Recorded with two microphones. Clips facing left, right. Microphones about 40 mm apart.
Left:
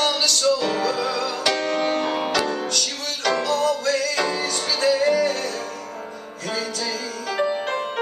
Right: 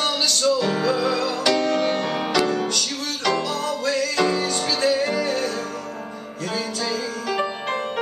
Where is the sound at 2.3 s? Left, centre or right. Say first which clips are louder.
Right 2 dB; centre; by 5.6 s right.